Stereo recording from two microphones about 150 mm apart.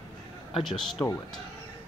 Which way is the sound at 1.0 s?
20° left (ahead or behind).